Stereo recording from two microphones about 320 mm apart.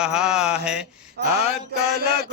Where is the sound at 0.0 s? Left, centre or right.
Centre.